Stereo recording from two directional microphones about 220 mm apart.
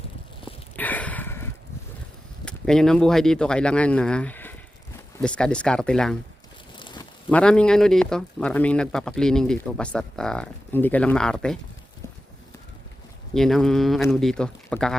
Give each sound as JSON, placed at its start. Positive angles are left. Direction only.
{"t": 0.8, "sound": "sniff", "side_deg": 5}
{"t": 2.4, "sound": "speech", "side_deg": 5}
{"t": 6.7, "sound": "a sound", "side_deg": 20}
{"t": 7.3, "sound": "speech", "side_deg": 5}
{"t": 13.3, "sound": "speech", "side_deg": 0}